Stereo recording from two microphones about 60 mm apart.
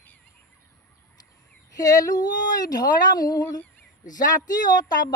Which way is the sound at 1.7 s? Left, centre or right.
Left.